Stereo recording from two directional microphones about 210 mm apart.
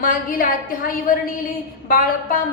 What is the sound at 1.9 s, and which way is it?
Speech, 40° left (ahead or behind).